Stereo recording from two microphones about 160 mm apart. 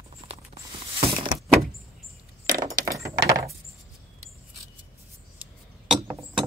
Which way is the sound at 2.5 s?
20° right (ahead or behind).